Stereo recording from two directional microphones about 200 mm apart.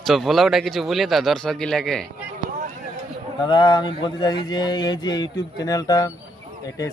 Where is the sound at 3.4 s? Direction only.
20° left (ahead or behind).